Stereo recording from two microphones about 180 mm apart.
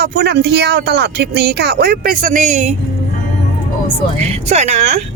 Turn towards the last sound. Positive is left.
turn(degrees=-40)  # may be behind; listen again after turning